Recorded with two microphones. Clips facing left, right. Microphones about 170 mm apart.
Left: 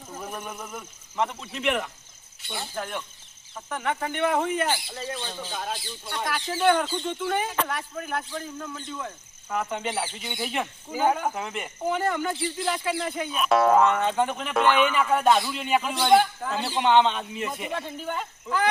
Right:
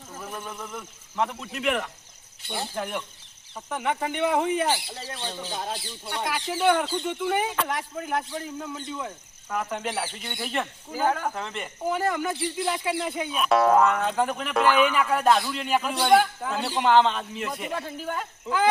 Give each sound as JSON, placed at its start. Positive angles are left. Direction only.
{"t": 0.2, "sound": "a sound", "side_deg": 15}
{"t": 0.6, "sound": "speech", "side_deg": 0}
{"t": 5.5, "sound": "speech", "side_deg": -30}
{"t": 6.1, "sound": "speech", "side_deg": -10}
{"t": 9.5, "sound": "speech", "side_deg": 0}
{"t": 11.0, "sound": "speech", "side_deg": 15}
{"t": 13.3, "sound": "speech", "side_deg": 0}